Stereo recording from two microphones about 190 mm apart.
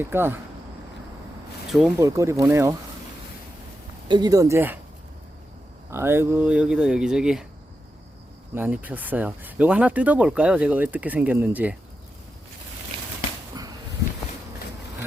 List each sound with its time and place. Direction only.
0.0 s speech: 10° right (ahead or behind)
2.0 s speech: 15° right (ahead or behind)
4.1 s speech: 20° right (ahead or behind)
5.9 s speech: 15° right (ahead or behind)
8.5 s speech: 10° right (ahead or behind)
13.6 s a sound: 20° right (ahead or behind)